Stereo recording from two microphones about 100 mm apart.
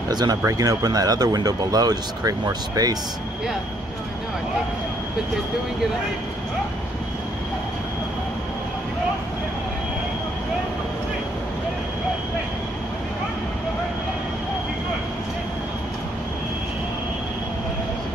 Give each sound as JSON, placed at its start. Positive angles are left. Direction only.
{"t": 0.1, "sound": "speech", "side_deg": -40}